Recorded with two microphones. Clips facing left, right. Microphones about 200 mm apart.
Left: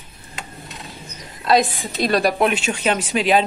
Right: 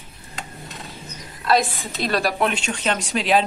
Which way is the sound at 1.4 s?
15° left (ahead or behind).